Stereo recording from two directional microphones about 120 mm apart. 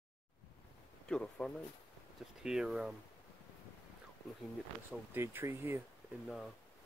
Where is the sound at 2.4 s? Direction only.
5° right (ahead or behind).